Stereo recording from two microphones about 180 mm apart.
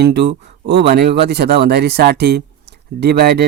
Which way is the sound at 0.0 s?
65° right (ahead or behind).